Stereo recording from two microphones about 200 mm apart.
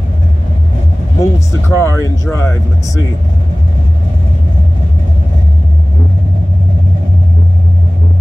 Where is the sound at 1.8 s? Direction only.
15° left (ahead or behind).